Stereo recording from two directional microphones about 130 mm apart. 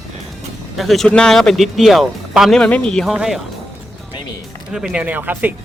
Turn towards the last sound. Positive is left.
turn(degrees=-10)  # may be behind; listen again after turning